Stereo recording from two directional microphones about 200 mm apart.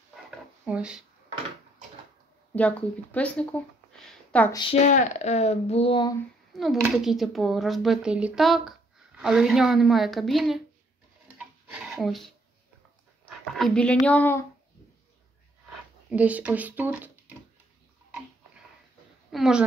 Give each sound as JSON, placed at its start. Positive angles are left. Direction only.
{"t": 0.7, "sound": "speech", "side_deg": -5}
{"t": 2.5, "sound": "speech", "side_deg": 5}
{"t": 4.5, "sound": "speech", "side_deg": 25}
{"t": 4.8, "sound": "speech", "side_deg": 35}
{"t": 6.5, "sound": "speech", "side_deg": 0}
{"t": 11.2, "sound": "a sound", "side_deg": -5}
{"t": 13.2, "sound": "speech", "side_deg": 5}
{"t": 16.1, "sound": "speech", "side_deg": -5}
{"t": 19.3, "sound": "speech", "side_deg": 0}